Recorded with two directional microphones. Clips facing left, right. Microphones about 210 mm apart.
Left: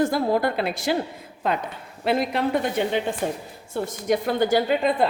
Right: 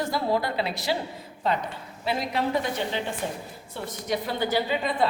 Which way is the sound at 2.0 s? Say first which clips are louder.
Left 5 dB; 55° left (ahead or behind).